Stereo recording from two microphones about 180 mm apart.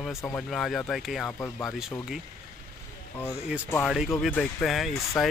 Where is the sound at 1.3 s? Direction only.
15° left (ahead or behind).